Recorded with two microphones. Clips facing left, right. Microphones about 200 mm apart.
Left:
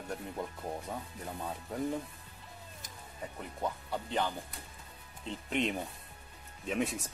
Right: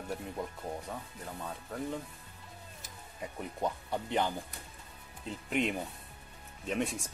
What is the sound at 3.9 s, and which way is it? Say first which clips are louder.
Speech: right 2 dB; 15° right (ahead or behind).